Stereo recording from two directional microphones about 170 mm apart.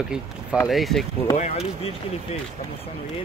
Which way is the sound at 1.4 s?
40° left (ahead or behind).